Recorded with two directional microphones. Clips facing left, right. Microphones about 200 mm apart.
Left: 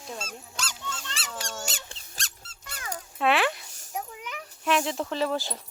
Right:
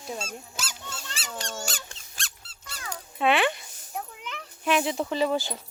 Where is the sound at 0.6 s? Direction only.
10° right (ahead or behind).